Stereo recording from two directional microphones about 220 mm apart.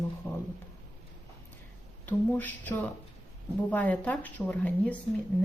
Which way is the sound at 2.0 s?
10° left (ahead or behind).